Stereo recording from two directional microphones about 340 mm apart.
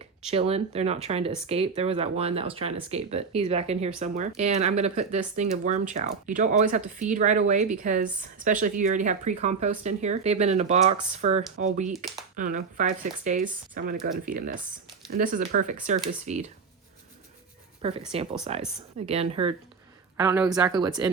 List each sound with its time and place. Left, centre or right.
0.3 s speech: centre
11.9 s speech: centre
12.4 s speech: right
17.8 s speech: centre